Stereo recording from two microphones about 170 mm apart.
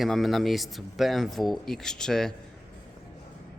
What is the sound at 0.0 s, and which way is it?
Speech, centre (ahead or behind).